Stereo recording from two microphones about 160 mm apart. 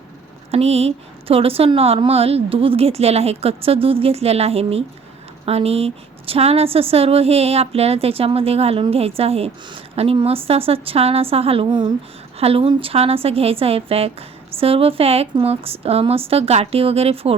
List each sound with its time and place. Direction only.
0.5 s a woman's voice: 40° right (ahead or behind)